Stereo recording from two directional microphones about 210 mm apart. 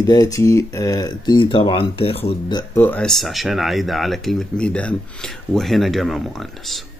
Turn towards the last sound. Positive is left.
turn(degrees=0)  # may be behind; listen again after turning